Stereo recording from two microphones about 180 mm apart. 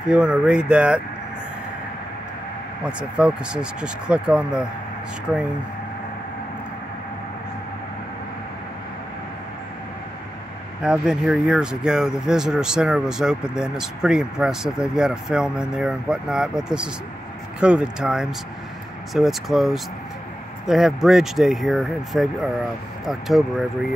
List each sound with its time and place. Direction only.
0.1 s speech: 5° right (ahead or behind)
2.8 s speech: 5° right (ahead or behind)
10.8 s speech: 5° right (ahead or behind)